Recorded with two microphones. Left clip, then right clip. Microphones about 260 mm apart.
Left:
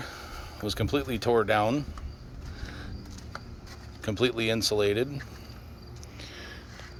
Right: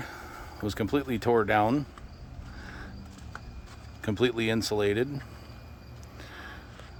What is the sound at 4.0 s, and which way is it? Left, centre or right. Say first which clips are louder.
Speech: even; centre.